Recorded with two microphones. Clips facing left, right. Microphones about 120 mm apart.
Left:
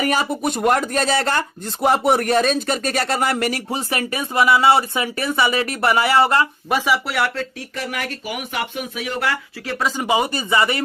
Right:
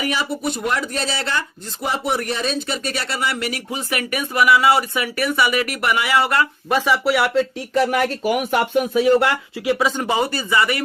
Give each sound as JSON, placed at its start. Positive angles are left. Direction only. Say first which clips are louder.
{"t": 0.0, "sound": "speech", "louder": "left 3 dB", "side_deg": 45}
{"t": 6.7, "sound": "speech", "louder": "right 2 dB", "side_deg": 5}
{"t": 7.7, "sound": "speech", "louder": "right 9 dB", "side_deg": -35}
{"t": 9.2, "sound": "speech", "louder": "right 5 dB", "side_deg": -15}
{"t": 9.7, "sound": "speech", "louder": "left 2 dB", "side_deg": 0}
{"t": 10.1, "sound": "a man's voice", "louder": "left 1 dB", "side_deg": 15}